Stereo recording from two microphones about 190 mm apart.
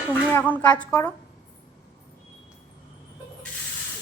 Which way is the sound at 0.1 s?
10° left (ahead or behind).